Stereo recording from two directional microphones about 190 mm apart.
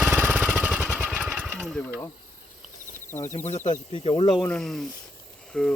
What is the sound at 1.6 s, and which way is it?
Mechanisms, centre (ahead or behind).